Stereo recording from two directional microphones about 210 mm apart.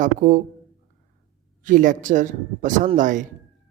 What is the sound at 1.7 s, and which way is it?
Speech, 40° right (ahead or behind).